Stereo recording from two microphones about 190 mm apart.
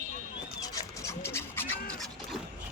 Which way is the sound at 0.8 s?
15° left (ahead or behind).